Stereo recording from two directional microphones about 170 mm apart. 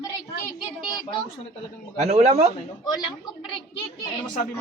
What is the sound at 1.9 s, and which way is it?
Speech, 40° right (ahead or behind).